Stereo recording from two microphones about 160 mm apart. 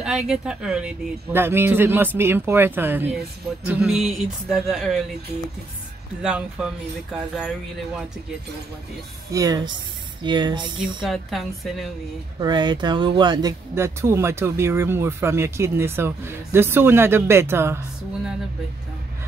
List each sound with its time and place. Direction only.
0.0 s speech: 5° right (ahead or behind)
6.2 s speech: 5° right (ahead or behind)
9.3 s a woman's voice: 25° right (ahead or behind)
10.8 s speech: centre (ahead or behind)
12.4 s speech: 25° right (ahead or behind)